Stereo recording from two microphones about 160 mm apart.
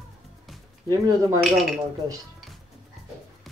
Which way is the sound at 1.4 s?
Centre (ahead or behind).